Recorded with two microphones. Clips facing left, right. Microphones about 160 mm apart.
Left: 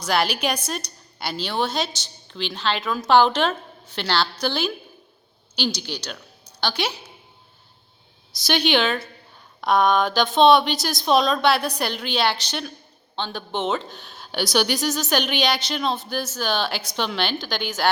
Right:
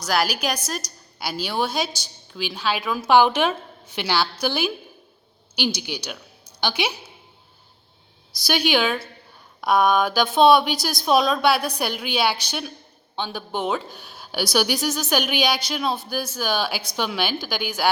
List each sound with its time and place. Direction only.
0.0 s a woman's voice: 5° right (ahead or behind)
8.4 s a woman's voice: 5° right (ahead or behind)